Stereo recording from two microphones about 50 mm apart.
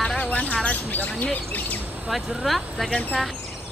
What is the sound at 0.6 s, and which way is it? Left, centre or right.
Speech, left.